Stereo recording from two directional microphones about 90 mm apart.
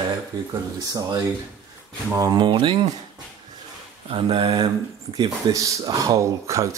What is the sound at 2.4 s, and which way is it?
Speech, 65° right (ahead or behind).